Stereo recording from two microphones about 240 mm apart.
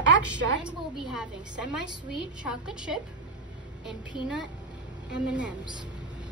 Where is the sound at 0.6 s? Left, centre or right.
Centre.